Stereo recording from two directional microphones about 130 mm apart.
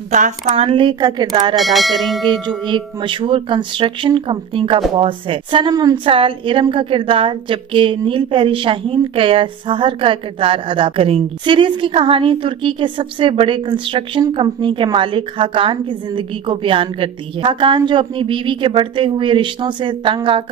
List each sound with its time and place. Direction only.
0.1 s speech: 65° right (ahead or behind)
0.7 s a woman's voice: 40° right (ahead or behind)
1.6 s speech: centre (ahead or behind)
2.4 s a woman's voice: 40° right (ahead or behind)
6.0 s a woman's voice: 45° right (ahead or behind)